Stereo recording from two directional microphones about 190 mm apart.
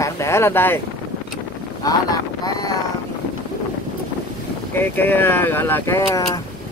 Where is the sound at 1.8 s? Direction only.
20° left (ahead or behind).